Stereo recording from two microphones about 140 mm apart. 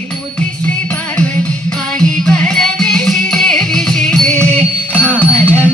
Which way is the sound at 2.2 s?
5° left (ahead or behind).